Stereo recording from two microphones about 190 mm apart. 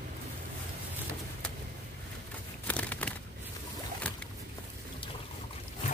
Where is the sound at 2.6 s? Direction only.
10° left (ahead or behind).